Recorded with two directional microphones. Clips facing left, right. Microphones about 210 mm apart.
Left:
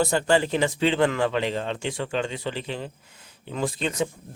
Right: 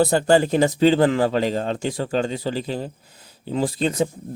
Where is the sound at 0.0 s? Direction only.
35° right (ahead or behind).